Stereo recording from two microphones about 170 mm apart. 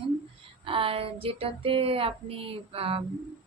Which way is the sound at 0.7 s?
35° right (ahead or behind).